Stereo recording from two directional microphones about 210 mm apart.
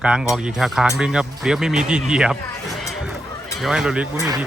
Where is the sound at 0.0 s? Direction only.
5° right (ahead or behind).